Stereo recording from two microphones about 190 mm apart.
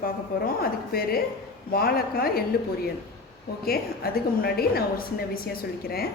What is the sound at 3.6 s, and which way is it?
A woman's voice, 50° left (ahead or behind).